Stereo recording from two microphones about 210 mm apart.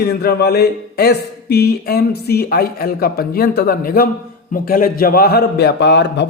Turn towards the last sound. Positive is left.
turn(degrees=55)  # may be behind; listen again after turning